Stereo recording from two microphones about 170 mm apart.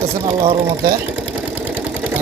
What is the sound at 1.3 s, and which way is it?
Engine, 5° right (ahead or behind).